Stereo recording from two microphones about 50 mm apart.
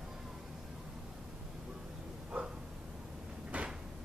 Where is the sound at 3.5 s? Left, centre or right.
Right.